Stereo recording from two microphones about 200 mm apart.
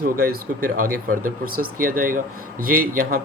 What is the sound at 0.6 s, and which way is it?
Speech, 45° right (ahead or behind).